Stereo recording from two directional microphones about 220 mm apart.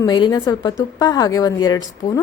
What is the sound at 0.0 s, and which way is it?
A woman's voice, 20° left (ahead or behind).